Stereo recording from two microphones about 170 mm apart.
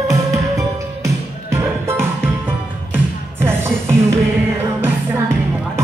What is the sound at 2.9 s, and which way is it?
Music, 15° right (ahead or behind).